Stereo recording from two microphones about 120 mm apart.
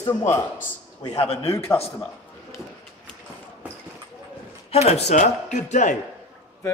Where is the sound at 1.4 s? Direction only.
25° left (ahead or behind).